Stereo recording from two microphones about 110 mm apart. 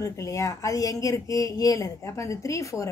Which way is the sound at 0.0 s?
30° left (ahead or behind).